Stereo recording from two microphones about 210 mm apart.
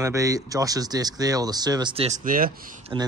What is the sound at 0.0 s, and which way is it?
Speech, 15° right (ahead or behind).